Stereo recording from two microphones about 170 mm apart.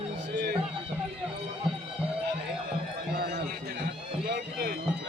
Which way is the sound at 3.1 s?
70° right (ahead or behind).